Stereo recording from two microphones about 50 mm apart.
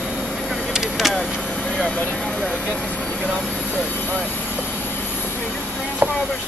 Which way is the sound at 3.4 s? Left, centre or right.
Centre.